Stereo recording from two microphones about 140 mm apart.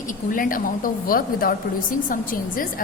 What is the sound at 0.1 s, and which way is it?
A woman's voice, 75° left (ahead or behind).